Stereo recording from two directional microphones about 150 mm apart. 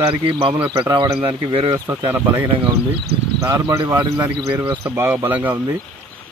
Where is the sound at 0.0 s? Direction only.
35° right (ahead or behind).